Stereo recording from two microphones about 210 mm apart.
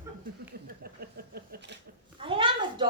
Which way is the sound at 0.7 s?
45° right (ahead or behind).